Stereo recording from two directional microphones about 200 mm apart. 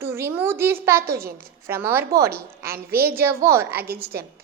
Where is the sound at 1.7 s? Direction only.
10° right (ahead or behind).